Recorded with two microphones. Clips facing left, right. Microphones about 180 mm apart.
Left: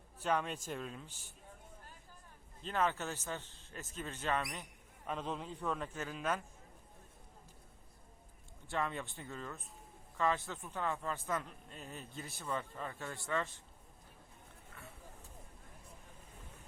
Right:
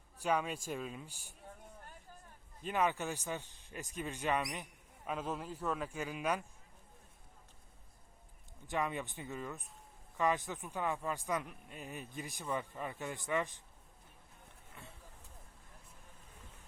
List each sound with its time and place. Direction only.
0.2 s speech: 10° right (ahead or behind)
2.6 s a man's voice: 15° right (ahead or behind)
8.6 s speech: 15° right (ahead or behind)
14.7 s vehicle: 15° right (ahead or behind)